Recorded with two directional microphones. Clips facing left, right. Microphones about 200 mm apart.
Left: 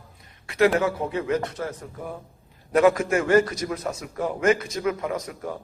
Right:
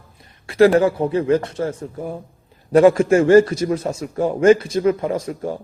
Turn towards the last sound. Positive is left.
turn(degrees=-30)  # may be behind; listen again after turning